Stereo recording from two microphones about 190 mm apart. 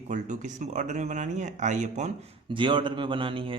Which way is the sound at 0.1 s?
40° right (ahead or behind).